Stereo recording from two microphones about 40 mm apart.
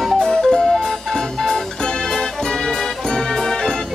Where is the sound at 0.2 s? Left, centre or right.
Centre.